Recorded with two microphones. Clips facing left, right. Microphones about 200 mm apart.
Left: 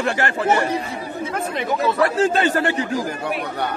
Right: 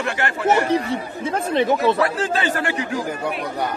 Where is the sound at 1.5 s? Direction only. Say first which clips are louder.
Right 5 dB; 25° right (ahead or behind).